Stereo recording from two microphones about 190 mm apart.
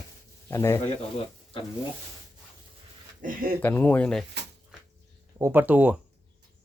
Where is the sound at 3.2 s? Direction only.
45° right (ahead or behind).